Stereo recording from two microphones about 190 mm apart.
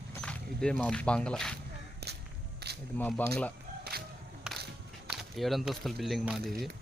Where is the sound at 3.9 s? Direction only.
55° right (ahead or behind).